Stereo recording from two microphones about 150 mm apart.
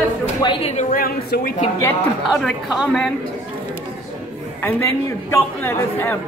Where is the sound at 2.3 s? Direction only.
Centre (ahead or behind).